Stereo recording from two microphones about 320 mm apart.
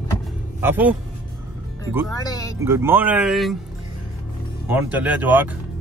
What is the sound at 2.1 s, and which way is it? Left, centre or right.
Speech, centre.